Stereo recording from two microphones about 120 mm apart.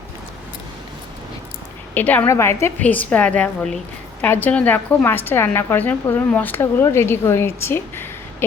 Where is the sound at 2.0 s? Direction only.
15° left (ahead or behind).